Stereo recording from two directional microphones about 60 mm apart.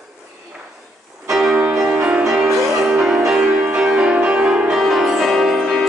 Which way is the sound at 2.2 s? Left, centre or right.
Centre.